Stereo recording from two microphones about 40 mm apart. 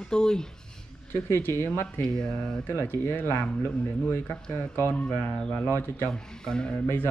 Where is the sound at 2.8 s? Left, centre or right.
Left.